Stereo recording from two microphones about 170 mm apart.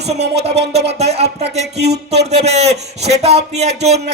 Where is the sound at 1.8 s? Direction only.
75° right (ahead or behind).